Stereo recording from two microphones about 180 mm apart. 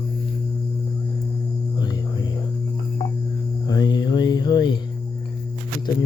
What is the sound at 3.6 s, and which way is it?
Mantra, 20° left (ahead or behind).